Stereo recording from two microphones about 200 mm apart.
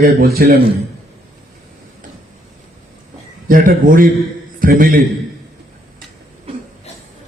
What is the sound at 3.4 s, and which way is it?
A man's voice, 45° right (ahead or behind).